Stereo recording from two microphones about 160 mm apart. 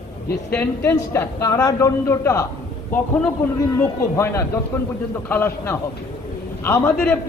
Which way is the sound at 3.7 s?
15° left (ahead or behind).